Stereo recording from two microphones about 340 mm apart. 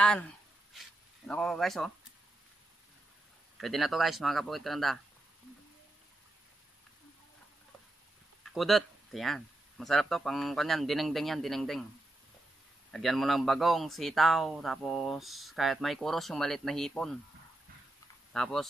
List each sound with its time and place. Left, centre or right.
0.7 s speech: centre
3.5 s speech: centre
8.5 s speech: centre
12.9 s speech: centre
18.3 s speech: centre